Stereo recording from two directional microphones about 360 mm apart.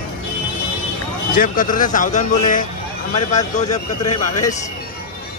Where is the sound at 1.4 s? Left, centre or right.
Left.